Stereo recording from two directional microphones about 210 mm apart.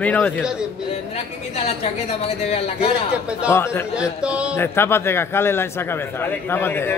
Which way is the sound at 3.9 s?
5° right (ahead or behind).